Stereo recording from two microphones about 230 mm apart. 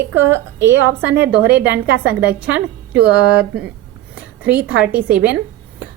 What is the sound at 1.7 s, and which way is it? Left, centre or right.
Speech, right.